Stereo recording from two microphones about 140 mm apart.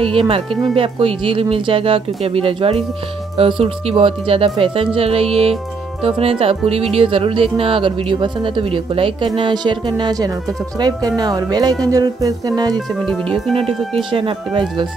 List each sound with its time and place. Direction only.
0.0 s speech: 40° right (ahead or behind)
12.7 s speech: 10° left (ahead or behind)
14.1 s speech: 40° right (ahead or behind)